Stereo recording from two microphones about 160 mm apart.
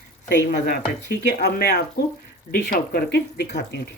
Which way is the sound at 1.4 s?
90° left.